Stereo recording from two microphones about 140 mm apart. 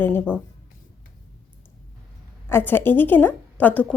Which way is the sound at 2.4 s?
15° left (ahead or behind).